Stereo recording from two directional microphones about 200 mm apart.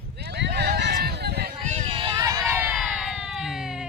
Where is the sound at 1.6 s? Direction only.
35° right (ahead or behind); by 2.7 s 10° right (ahead or behind).